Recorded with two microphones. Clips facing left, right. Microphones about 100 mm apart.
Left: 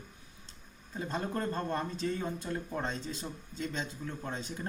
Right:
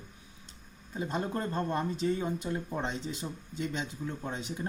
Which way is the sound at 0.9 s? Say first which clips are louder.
Right 2 dB; 10° right (ahead or behind).